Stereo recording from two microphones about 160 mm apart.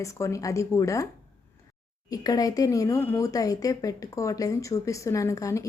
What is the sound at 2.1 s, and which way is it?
Speech, 20° left (ahead or behind).